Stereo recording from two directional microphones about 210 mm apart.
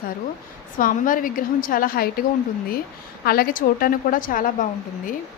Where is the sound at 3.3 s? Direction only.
45° left (ahead or behind).